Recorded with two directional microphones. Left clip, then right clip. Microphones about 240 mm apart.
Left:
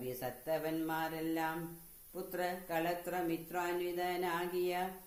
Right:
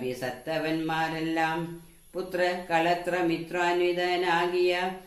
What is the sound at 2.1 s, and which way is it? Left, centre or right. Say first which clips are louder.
Mantra: right 11 dB; left.